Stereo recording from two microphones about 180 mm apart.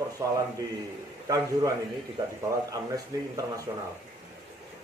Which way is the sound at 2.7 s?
20° right (ahead or behind).